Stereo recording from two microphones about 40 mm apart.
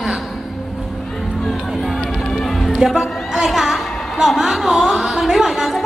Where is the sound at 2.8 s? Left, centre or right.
Centre.